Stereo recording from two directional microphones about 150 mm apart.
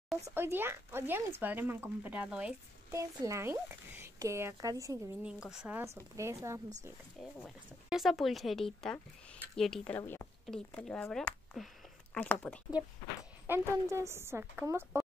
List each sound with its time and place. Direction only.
0.3 s speech: 15° right (ahead or behind)
2.9 s speech: 20° right (ahead or behind)
5.2 s speech: 5° right (ahead or behind)
6.1 s speech: 20° right (ahead or behind)
7.2 s speech: 5° right (ahead or behind)
9.9 s speech: 15° left (ahead or behind)
12.8 s speech: 10° right (ahead or behind)